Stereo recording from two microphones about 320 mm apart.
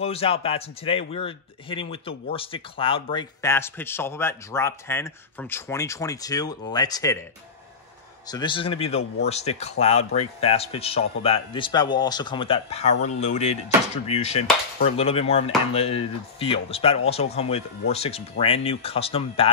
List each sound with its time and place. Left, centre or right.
0.0 s speech: centre
8.3 s speech: centre
14.0 s chop: centre
17.9 s speech: centre